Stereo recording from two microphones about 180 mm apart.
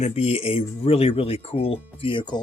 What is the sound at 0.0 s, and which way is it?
Speech, 35° left (ahead or behind).